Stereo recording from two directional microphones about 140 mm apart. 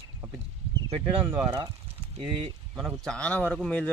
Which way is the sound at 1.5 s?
40° right (ahead or behind).